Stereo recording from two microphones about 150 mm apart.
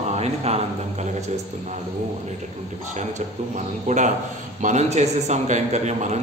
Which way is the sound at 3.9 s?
50° right (ahead or behind).